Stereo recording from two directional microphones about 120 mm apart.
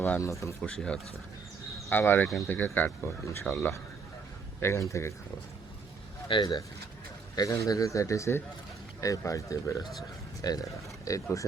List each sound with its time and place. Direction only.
0.2 s speech: 25° left (ahead or behind)
0.6 s speech: 10° left (ahead or behind); by 5.1 s 25° left (ahead or behind)
6.2 s speech: 40° left (ahead or behind)